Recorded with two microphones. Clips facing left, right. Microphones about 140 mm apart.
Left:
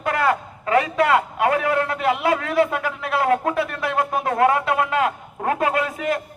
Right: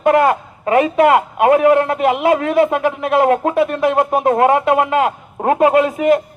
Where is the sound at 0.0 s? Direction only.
20° right (ahead or behind).